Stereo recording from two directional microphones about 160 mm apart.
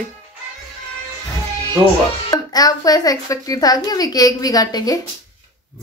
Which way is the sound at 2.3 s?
25° left (ahead or behind).